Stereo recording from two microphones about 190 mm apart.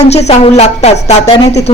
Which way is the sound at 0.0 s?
35° left (ahead or behind).